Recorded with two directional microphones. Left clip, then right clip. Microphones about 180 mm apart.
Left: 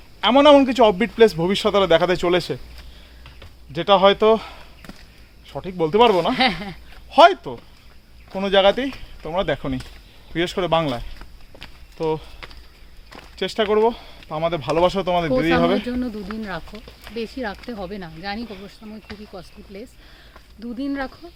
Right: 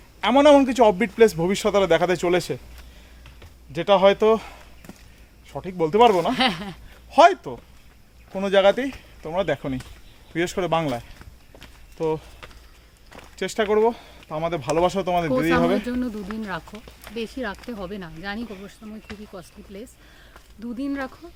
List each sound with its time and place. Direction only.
0.2 s a man's voice: 5° left (ahead or behind)
3.7 s a man's voice: 5° left (ahead or behind)
6.3 s speech: 10° right (ahead or behind)
7.1 s a man's voice: 5° left (ahead or behind)
12.4 s a sound: 30° left (ahead or behind)
13.3 s speech: 5° left (ahead or behind)
15.9 s speech: 15° right (ahead or behind)
18.4 s a man's voice: centre (ahead or behind)
19.3 s speech: 15° right (ahead or behind)